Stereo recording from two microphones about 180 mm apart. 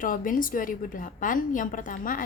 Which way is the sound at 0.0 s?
50° left (ahead or behind).